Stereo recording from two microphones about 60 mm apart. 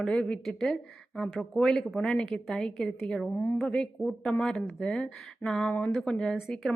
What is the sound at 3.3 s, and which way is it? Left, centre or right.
Speech, left.